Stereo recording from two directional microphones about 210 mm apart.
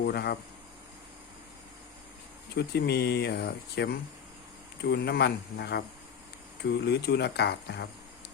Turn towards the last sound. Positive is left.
turn(degrees=50)  # may be behind; listen again after turning